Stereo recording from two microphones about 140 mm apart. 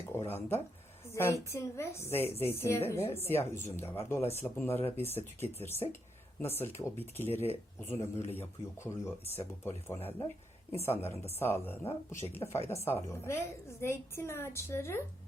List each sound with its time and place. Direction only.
0.0 s a woman's voice: 15° left (ahead or behind)